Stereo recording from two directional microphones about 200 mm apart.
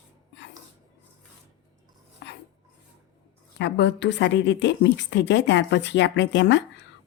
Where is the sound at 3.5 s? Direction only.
60° left (ahead or behind).